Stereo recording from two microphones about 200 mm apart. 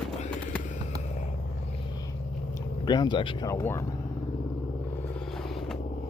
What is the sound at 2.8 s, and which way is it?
Speech, 20° left (ahead or behind).